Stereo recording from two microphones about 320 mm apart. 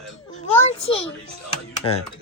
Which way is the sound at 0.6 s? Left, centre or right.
Centre.